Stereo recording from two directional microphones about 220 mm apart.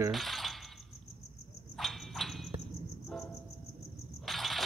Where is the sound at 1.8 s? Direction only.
Centre (ahead or behind).